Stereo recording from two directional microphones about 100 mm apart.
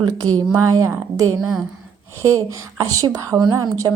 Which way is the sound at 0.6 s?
30° right (ahead or behind).